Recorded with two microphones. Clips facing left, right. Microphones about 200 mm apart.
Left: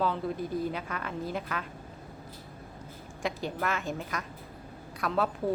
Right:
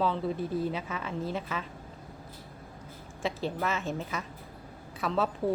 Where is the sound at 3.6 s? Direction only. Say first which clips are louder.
Left 1 dB; centre (ahead or behind).